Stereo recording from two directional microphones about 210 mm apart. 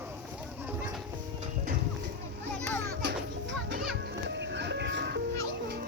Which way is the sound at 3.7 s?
50° right (ahead or behind).